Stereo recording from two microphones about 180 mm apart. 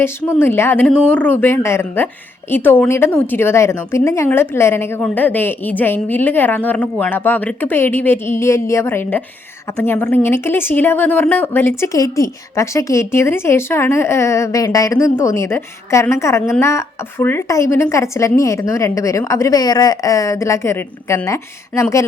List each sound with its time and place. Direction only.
0.0 s a woman's voice: 15° left (ahead or behind)